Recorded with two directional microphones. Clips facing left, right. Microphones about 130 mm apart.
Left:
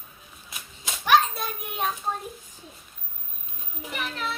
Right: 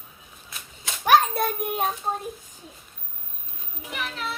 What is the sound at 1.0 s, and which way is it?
Child singing, 50° right (ahead or behind).